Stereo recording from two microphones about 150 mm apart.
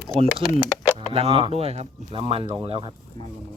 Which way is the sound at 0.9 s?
40° right (ahead or behind).